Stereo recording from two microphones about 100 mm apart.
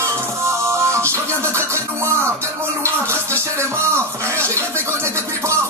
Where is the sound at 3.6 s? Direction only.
25° right (ahead or behind).